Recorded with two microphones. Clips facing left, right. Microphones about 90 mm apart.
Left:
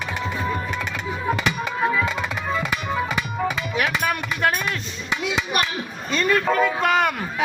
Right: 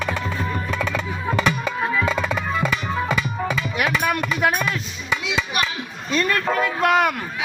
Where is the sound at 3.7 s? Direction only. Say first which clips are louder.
Right 3 dB; centre (ahead or behind).